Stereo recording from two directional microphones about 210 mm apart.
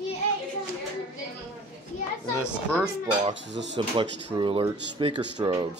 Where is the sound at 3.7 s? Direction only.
25° right (ahead or behind).